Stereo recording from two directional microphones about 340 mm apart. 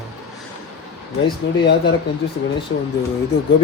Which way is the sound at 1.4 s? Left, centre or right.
Left.